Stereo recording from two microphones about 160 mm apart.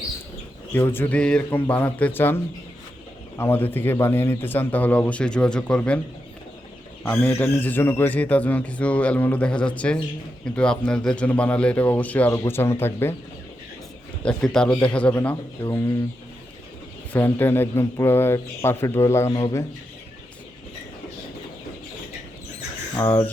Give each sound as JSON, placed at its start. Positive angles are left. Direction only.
{"t": 0.7, "sound": "a man's voice", "side_deg": 15}
{"t": 7.0, "sound": "a man's voice", "side_deg": 10}
{"t": 14.3, "sound": "a man's voice", "side_deg": 5}
{"t": 17.1, "sound": "a man's voice", "side_deg": 15}
{"t": 23.0, "sound": "a man's voice", "side_deg": 15}